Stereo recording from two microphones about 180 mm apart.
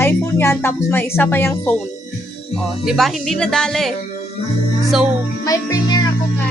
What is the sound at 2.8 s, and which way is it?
Speech, centre (ahead or behind).